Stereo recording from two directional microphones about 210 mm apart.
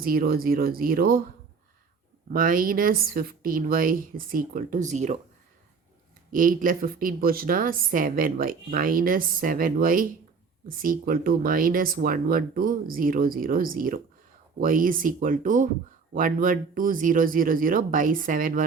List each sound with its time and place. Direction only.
0.0 s speech: 45° right (ahead or behind)
2.3 s speech: 40° right (ahead or behind)
6.3 s a woman's voice: 40° right (ahead or behind)